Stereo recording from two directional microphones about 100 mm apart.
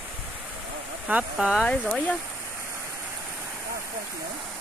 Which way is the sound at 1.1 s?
15° right (ahead or behind).